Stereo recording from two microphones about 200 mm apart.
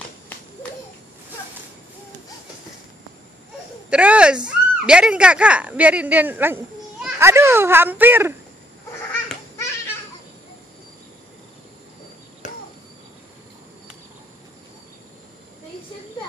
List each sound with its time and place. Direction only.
3.9 s speech: 5° right (ahead or behind)
12.4 s chop: 40° left (ahead or behind)